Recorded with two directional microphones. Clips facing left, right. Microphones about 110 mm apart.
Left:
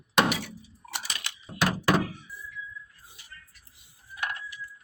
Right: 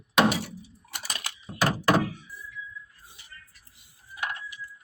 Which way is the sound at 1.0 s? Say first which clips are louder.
Right 2 dB; 40° right (ahead or behind).